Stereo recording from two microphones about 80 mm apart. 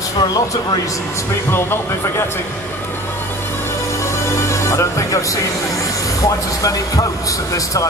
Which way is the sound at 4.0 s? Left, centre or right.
Left.